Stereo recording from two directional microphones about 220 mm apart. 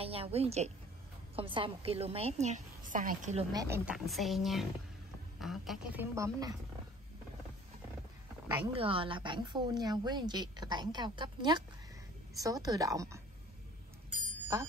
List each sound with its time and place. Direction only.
0.0 s a woman's voice: 25° right (ahead or behind)
3.5 s speech: 10° right (ahead or behind)
6.1 s a woman's voice: 15° right (ahead or behind)
8.7 s a woman's voice: 25° right (ahead or behind)
14.5 s a woman's voice: 15° right (ahead or behind)